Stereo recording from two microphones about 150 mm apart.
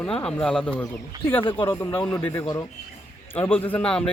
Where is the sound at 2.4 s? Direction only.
25° left (ahead or behind).